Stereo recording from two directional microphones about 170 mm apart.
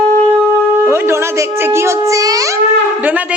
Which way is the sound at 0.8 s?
15° right (ahead or behind).